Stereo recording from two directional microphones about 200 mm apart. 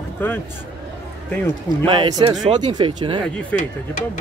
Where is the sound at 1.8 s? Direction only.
20° right (ahead or behind).